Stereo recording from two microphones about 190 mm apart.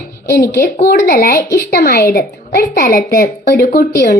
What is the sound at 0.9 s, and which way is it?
A woman's voice, 50° left (ahead or behind).